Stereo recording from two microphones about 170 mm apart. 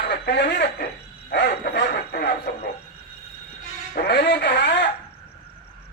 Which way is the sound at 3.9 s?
70° left (ahead or behind).